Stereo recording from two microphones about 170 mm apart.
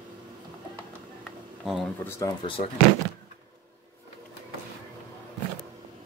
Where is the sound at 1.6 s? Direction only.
Centre (ahead or behind).